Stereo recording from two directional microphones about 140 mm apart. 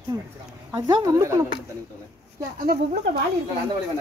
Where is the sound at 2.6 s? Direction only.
90° right.